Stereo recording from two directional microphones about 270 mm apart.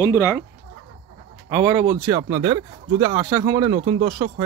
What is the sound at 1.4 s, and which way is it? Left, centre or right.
Speech, centre.